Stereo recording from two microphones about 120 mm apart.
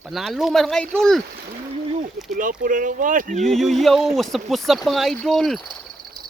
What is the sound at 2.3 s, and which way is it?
Speech, 90° right.